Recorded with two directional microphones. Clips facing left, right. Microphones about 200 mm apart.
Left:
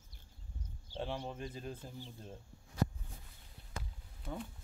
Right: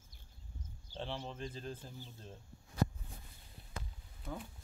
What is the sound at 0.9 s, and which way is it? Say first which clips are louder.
Speech: left 2 dB; 10° left (ahead or behind).